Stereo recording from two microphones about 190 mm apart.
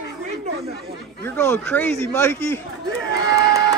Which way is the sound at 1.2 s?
10° left (ahead or behind).